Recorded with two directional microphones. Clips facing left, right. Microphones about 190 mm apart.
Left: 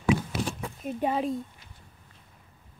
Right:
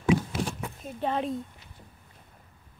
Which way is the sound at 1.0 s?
5° left (ahead or behind).